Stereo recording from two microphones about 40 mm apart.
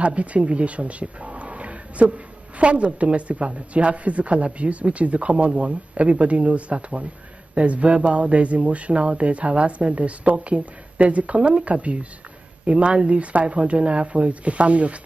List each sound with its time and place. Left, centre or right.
0.0 s speech: right